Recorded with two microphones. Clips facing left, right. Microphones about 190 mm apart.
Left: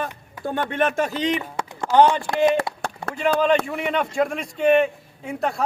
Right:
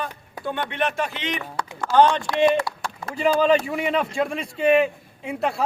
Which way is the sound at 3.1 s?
5° right (ahead or behind).